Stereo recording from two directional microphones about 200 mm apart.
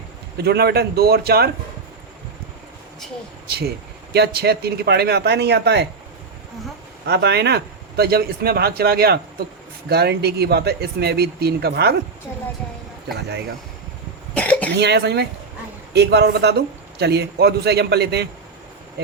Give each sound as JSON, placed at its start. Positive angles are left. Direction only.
{"t": 0.3, "sound": "speech", "side_deg": -55}
{"t": 3.4, "sound": "a man's voice", "side_deg": -50}
{"t": 7.0, "sound": "speech", "side_deg": -55}
{"t": 14.3, "sound": "cough", "side_deg": 5}
{"t": 14.8, "sound": "a man's voice", "side_deg": -55}